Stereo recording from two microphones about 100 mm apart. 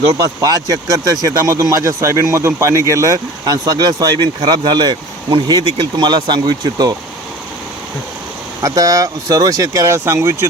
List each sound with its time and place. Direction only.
0.4 s speech: 40° right (ahead or behind)
8.6 s speech: 35° right (ahead or behind)